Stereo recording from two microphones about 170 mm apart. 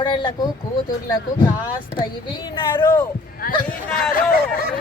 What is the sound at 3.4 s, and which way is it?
Speech, 60° left (ahead or behind).